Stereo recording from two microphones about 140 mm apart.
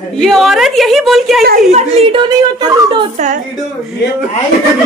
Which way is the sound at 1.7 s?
50° right (ahead or behind).